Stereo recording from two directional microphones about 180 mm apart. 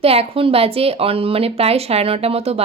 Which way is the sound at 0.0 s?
35° right (ahead or behind).